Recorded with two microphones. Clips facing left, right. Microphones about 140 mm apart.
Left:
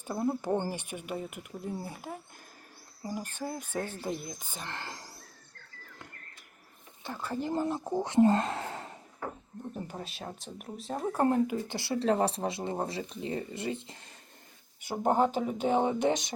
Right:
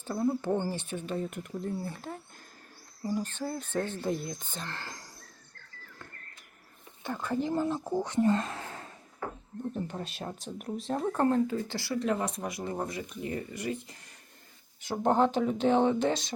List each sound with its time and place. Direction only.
0.0 s speech: 15° left (ahead or behind)
4.6 s speech: 20° left (ahead or behind)
7.0 s speech: 5° left (ahead or behind); by 8.3 s 20° left (ahead or behind)
8.3 s a sound: 30° left (ahead or behind)
9.7 s speech: 5° left (ahead or behind); by 13.9 s 25° left (ahead or behind)
14.8 s speech: 10° left (ahead or behind)